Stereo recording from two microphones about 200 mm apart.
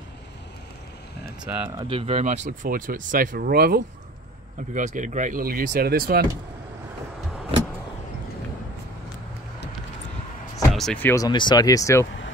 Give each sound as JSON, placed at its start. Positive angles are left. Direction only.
{"t": 1.4, "sound": "speech", "side_deg": -10}
{"t": 1.8, "sound": "speech", "side_deg": -25}
{"t": 4.7, "sound": "speech", "side_deg": -40}
{"t": 10.7, "sound": "speech", "side_deg": 0}